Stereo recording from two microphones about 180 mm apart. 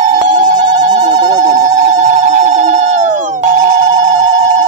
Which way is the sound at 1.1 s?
20° right (ahead or behind).